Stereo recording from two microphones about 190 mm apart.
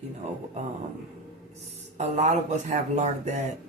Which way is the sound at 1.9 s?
40° right (ahead or behind).